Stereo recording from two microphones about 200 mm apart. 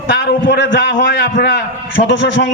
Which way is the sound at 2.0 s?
45° left (ahead or behind).